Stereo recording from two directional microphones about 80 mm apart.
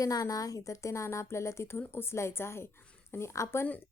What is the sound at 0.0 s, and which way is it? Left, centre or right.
A woman's voice, left.